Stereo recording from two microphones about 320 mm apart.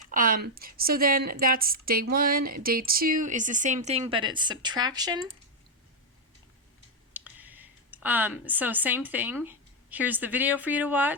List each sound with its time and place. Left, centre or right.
0.1 s a woman's voice: right
7.1 s speech: centre